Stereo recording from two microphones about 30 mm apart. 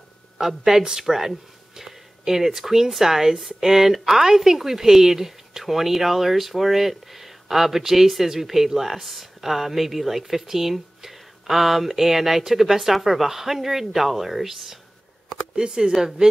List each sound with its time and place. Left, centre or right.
0.4 s speech: centre
15.5 s speech: right